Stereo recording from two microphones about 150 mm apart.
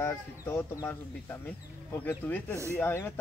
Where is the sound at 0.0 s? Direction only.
15° left (ahead or behind).